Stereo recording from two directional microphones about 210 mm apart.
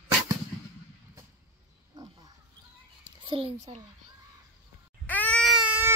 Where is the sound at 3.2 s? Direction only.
25° right (ahead or behind).